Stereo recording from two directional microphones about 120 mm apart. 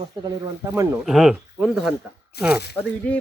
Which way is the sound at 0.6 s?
25° right (ahead or behind).